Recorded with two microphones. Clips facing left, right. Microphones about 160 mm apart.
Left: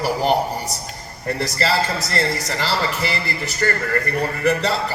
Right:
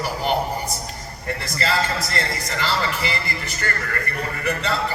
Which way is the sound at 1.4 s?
40° left (ahead or behind).